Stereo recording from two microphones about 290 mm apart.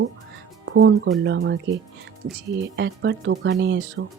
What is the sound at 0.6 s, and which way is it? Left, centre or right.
Speech, right.